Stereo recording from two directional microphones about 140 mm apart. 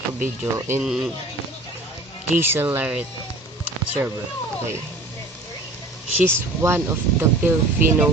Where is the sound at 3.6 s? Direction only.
10° right (ahead or behind).